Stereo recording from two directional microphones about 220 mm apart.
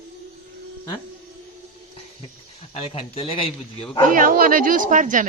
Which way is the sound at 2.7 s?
25° left (ahead or behind).